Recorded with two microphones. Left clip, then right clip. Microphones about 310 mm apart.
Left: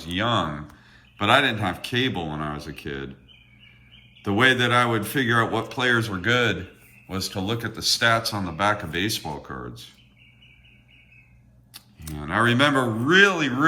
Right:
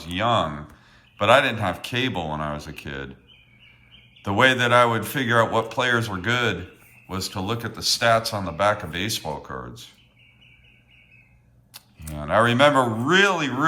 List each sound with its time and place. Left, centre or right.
0.0 s speech: centre
4.2 s speech: centre
12.1 s speech: centre